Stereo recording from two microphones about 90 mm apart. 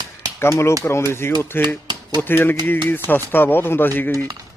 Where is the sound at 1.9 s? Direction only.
50° right (ahead or behind).